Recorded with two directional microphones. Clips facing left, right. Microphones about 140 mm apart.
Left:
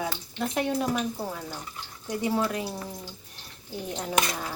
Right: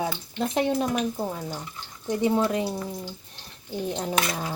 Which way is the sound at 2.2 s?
20° right (ahead or behind).